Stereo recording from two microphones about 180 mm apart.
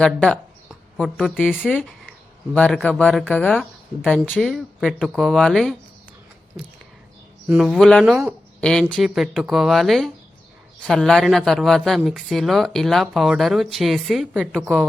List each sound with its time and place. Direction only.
0.0 s speech: 5° left (ahead or behind)
7.4 s speech: 5° right (ahead or behind)